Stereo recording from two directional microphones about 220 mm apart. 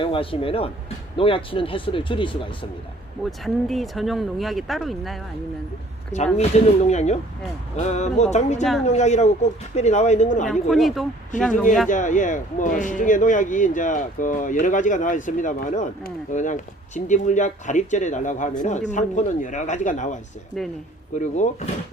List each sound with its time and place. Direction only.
0.0 s speech: 25° left (ahead or behind)
3.2 s speech: centre (ahead or behind)
6.8 s speech: 30° left (ahead or behind)
10.5 s speech: centre (ahead or behind)
11.9 s speech: 35° left (ahead or behind)
20.6 s speech: centre (ahead or behind)
21.2 s speech: 35° left (ahead or behind)